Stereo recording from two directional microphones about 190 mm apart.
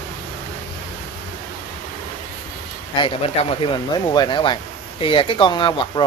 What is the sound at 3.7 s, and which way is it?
Speech, 25° left (ahead or behind).